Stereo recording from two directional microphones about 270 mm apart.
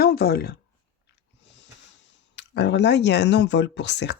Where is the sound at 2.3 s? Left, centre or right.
Left.